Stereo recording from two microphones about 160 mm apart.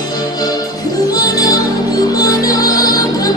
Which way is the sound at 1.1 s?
20° left (ahead or behind).